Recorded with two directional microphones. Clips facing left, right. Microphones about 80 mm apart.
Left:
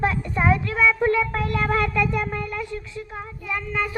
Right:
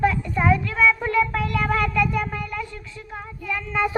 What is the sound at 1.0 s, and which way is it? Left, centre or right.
Speech, left.